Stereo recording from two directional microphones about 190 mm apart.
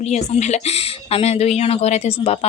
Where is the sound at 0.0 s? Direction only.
35° left (ahead or behind).